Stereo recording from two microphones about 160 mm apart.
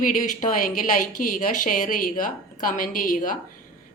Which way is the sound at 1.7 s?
55° left (ahead or behind).